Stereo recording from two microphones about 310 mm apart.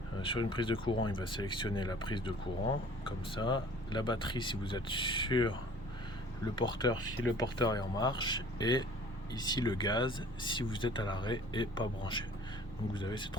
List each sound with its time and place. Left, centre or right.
0.2 s speech: centre